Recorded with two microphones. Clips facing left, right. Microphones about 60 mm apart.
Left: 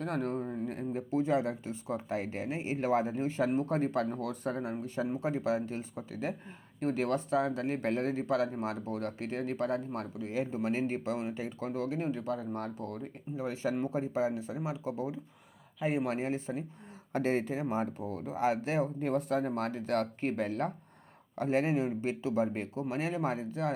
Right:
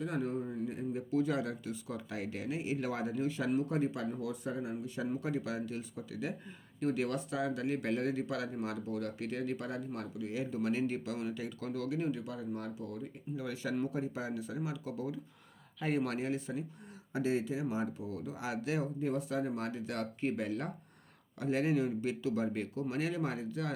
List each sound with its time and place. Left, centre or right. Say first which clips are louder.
0.0 s speech: left 2 dB; left
1.1 s speech: left 4 dB; left
5.0 s speech: left 4 dB; left
13.3 s speech: left 4 dB; left
16.1 s speech: left 2 dB; left
17.1 s speech: left 3 dB; left